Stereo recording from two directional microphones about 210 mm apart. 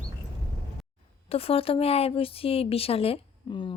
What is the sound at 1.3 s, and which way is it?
Speech, 25° left (ahead or behind).